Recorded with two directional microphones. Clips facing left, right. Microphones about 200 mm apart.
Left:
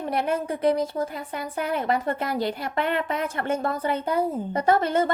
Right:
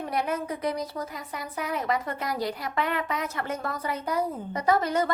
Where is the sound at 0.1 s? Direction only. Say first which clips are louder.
Left 4 dB; 30° left (ahead or behind).